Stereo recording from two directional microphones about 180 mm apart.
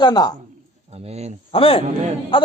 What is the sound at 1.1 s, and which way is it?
Speech, 35° right (ahead or behind).